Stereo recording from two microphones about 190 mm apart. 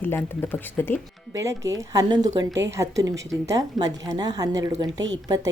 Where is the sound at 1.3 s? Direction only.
15° right (ahead or behind).